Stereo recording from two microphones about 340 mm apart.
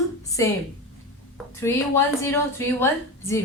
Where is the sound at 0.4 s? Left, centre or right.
Centre.